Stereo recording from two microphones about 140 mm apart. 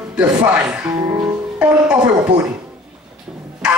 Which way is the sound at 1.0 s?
25° right (ahead or behind).